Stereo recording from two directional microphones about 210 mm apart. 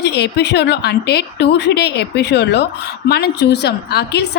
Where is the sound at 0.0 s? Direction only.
55° left (ahead or behind).